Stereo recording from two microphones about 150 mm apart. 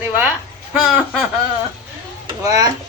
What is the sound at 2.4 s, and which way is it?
Speech, 25° right (ahead or behind).